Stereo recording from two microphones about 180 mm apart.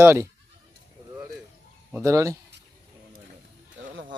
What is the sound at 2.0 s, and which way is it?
Speech, 15° right (ahead or behind).